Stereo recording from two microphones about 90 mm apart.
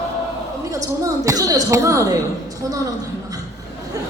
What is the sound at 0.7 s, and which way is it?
Speech, 40° right (ahead or behind).